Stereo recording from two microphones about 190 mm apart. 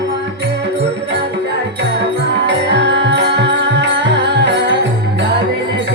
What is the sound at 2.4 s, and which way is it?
Music, 65° right (ahead or behind).